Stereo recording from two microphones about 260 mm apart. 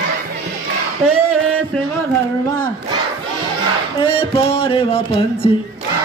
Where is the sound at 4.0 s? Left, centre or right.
Left.